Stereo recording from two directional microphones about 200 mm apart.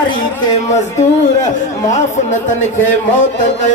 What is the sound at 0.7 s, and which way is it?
Speech, 35° left (ahead or behind).